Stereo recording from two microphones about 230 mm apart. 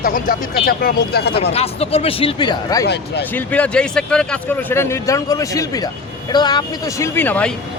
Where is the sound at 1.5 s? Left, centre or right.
Left.